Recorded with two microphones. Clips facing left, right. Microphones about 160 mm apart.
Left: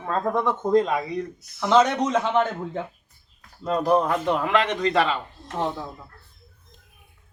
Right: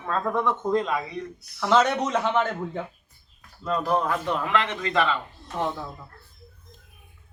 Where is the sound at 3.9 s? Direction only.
25° left (ahead or behind).